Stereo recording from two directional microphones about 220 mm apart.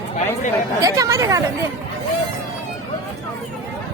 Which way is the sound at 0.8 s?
15° right (ahead or behind).